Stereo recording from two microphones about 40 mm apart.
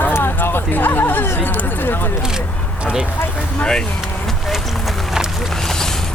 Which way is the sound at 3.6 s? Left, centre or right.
Left.